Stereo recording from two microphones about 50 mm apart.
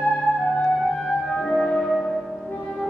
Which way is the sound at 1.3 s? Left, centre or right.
Centre.